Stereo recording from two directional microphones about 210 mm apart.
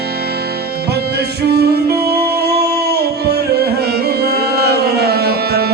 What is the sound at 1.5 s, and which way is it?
Music, 50° right (ahead or behind).